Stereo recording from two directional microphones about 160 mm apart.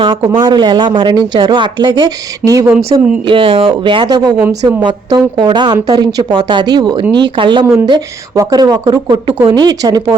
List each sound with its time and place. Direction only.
0.2 s speech: 15° right (ahead or behind)
0.4 s speech: 30° right (ahead or behind)
3.2 s speech: 30° right (ahead or behind)